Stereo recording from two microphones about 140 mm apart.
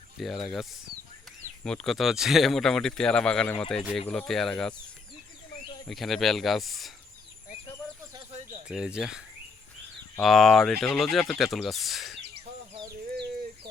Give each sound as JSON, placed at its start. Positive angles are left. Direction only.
{"t": 0.2, "sound": "speech", "side_deg": 0}
{"t": 5.9, "sound": "speech", "side_deg": 0}
{"t": 8.3, "sound": "a sound", "side_deg": -50}
{"t": 8.6, "sound": "speech", "side_deg": -5}